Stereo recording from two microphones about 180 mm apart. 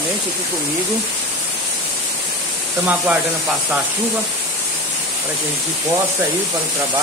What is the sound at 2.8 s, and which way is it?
Speech, 5° right (ahead or behind).